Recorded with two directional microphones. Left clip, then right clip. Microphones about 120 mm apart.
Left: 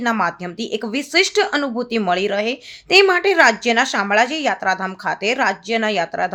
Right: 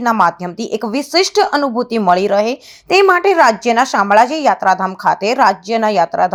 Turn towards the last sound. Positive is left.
turn(degrees=-30)  # may be behind; listen again after turning